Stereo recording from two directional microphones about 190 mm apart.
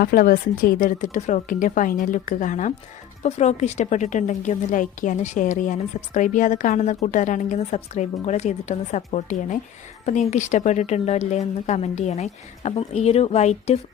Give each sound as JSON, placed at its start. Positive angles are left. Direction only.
{"t": 0.0, "sound": "a woman's voice", "side_deg": 50}